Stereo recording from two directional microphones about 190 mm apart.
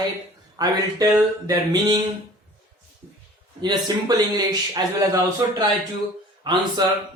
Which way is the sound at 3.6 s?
20° right (ahead or behind).